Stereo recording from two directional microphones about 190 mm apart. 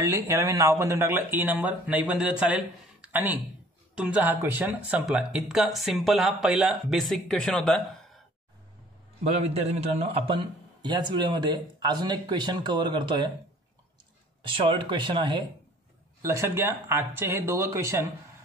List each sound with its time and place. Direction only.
0.0 s speech: 15° right (ahead or behind); by 8.2 s 5° left (ahead or behind)
9.3 s a man's voice: 35° right (ahead or behind)
14.4 s a man's voice: 25° right (ahead or behind)